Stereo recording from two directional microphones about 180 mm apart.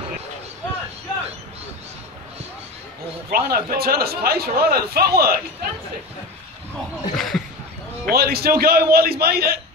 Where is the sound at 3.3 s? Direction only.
55° right (ahead or behind).